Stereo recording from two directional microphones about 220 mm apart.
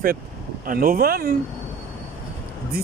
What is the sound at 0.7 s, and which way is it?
Speech, 40° right (ahead or behind).